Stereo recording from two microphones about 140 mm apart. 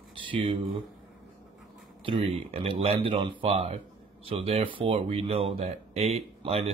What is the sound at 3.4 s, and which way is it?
Speech, 50° right (ahead or behind).